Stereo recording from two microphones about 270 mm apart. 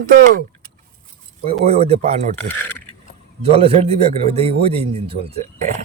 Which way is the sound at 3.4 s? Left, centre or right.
Right.